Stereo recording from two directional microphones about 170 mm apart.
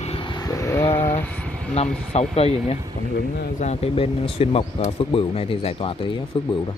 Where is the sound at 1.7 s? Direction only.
35° left (ahead or behind).